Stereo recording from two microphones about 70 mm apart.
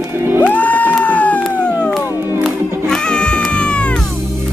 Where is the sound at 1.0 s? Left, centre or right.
Left.